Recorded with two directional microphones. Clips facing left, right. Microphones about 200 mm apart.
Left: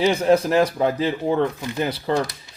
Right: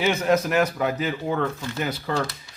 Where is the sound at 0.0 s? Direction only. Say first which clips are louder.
Left 4 dB; 30° left (ahead or behind).